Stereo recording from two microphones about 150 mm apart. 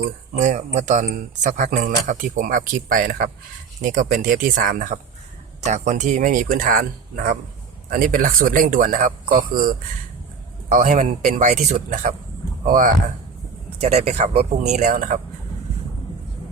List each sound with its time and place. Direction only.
0.3 s speech: 55° right (ahead or behind)
13.8 s speech: 45° right (ahead or behind); by 15.2 s 65° right (ahead or behind)